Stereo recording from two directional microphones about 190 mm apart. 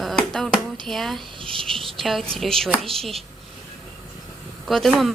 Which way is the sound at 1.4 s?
25° right (ahead or behind).